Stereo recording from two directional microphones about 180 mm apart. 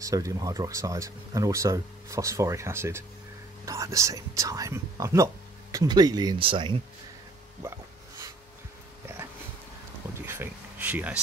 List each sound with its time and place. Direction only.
0.0 s speech: 20° right (ahead or behind)
10.2 s speech: 10° right (ahead or behind)